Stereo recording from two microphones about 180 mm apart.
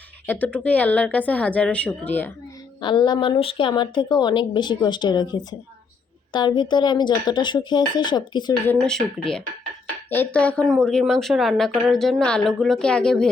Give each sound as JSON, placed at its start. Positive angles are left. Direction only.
{"t": 0.3, "sound": "a woman's voice", "side_deg": 10}
{"t": 2.8, "sound": "a woman's voice", "side_deg": 25}
{"t": 8.6, "sound": "speech", "side_deg": 5}